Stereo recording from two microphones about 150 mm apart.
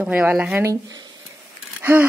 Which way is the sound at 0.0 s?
10° right (ahead or behind).